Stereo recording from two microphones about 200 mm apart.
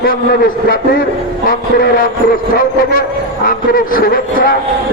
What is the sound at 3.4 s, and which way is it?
A man's voice, 45° left (ahead or behind).